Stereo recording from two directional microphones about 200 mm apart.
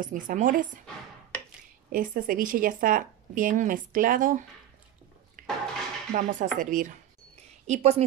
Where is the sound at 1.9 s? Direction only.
45° right (ahead or behind).